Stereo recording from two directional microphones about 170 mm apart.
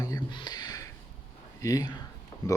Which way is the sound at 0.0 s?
25° left (ahead or behind).